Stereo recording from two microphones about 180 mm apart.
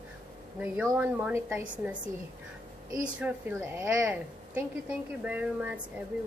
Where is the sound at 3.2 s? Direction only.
10° right (ahead or behind).